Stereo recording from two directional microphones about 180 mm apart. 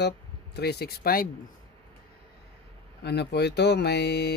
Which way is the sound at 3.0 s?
70° left (ahead or behind).